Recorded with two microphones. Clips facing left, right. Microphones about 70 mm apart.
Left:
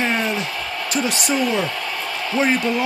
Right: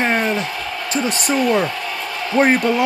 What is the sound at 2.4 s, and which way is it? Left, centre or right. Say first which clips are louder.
Speech: right 5 dB; right.